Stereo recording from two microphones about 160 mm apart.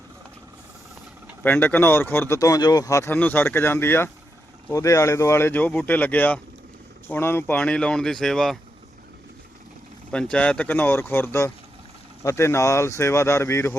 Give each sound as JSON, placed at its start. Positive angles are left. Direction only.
{"t": 1.5, "sound": "speech", "side_deg": 10}
{"t": 10.1, "sound": "speech", "side_deg": 5}